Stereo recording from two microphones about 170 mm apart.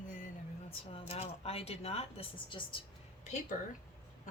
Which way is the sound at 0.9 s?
35° left (ahead or behind).